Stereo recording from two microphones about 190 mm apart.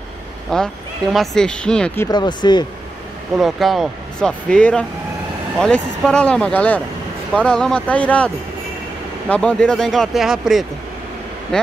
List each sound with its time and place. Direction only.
0.5 s speech: centre (ahead or behind)
2.0 s speech: 25° left (ahead or behind)
3.3 s speech: centre (ahead or behind)
9.3 s speech: 5° left (ahead or behind)